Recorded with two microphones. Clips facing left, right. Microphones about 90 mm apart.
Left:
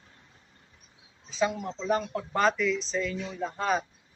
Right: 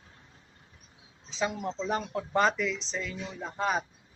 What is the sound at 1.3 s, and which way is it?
Speech, 25° right (ahead or behind).